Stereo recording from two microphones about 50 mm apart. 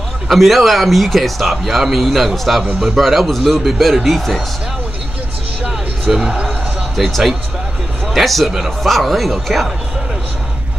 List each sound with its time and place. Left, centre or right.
0.3 s speech: centre
6.1 s speech: centre
7.0 s speech: centre